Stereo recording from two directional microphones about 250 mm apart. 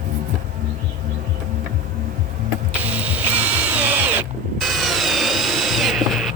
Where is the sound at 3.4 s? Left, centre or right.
Centre.